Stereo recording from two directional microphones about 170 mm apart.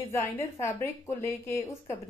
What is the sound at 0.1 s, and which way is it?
A woman's voice, 15° left (ahead or behind).